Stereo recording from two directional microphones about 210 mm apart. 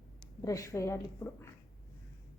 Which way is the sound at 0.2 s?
15° left (ahead or behind).